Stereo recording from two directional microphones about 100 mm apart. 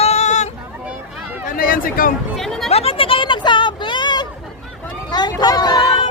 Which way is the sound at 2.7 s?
85° left.